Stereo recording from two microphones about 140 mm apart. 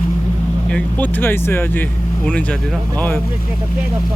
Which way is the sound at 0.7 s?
10° left (ahead or behind).